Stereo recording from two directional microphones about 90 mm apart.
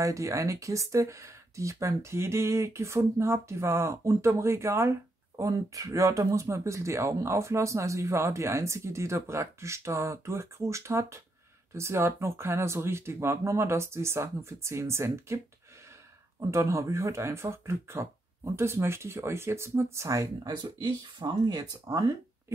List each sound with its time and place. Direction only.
0.0 s speech: 35° right (ahead or behind)
20.5 s speech: 60° right (ahead or behind)
21.8 s speech: 40° right (ahead or behind)